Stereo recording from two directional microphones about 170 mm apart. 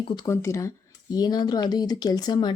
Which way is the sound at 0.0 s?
30° left (ahead or behind).